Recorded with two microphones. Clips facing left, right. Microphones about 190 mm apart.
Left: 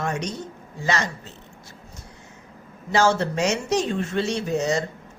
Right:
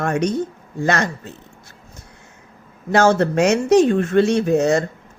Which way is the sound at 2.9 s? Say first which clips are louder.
Right 5 dB; 55° right (ahead or behind).